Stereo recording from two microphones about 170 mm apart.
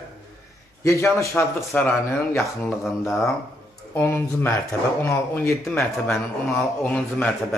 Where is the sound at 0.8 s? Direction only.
15° left (ahead or behind).